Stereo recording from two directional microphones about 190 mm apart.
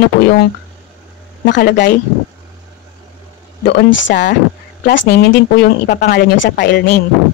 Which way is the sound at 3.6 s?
70° left (ahead or behind).